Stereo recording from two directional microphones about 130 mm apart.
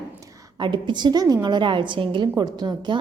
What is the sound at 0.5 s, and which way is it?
A child's voice, 35° right (ahead or behind).